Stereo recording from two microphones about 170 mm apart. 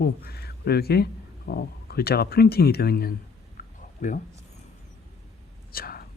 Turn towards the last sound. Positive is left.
turn(degrees=60)  # may be behind; listen again after turning